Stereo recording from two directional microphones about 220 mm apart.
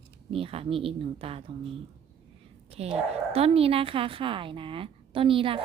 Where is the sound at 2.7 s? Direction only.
25° right (ahead or behind).